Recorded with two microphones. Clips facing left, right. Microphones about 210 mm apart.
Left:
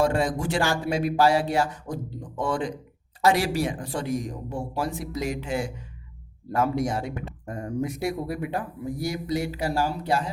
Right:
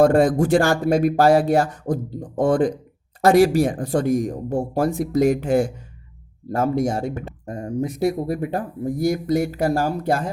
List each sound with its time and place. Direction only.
0.0 s speech: 50° right (ahead or behind)
7.4 s speech: 30° right (ahead or behind); by 10.2 s 50° right (ahead or behind)